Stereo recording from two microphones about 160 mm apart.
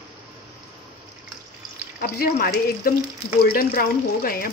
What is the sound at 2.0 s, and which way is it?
Speech, 70° left (ahead or behind).